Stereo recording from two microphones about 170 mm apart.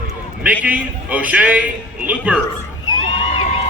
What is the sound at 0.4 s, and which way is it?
A man's voice, 10° right (ahead or behind).